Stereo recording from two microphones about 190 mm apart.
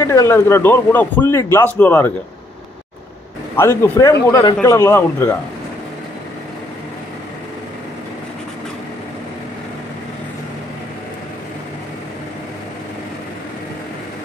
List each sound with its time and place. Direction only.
0.0 s speech: 15° left (ahead or behind)
3.5 s speech: 10° left (ahead or behind)